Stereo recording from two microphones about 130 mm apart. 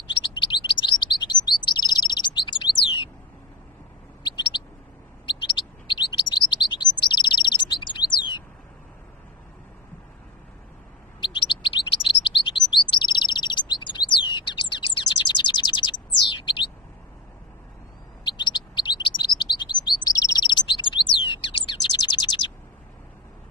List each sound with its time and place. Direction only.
0.2 s chirp: 40° left (ahead or behind)
5.2 s chirp: 40° left (ahead or behind)
11.1 s bird: 40° left (ahead or behind)
12.2 s chirp: 40° left (ahead or behind)
18.2 s chirp: 35° left (ahead or behind)